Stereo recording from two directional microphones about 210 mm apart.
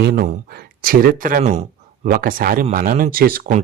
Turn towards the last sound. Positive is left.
turn(degrees=-40)  # may be behind; listen again after turning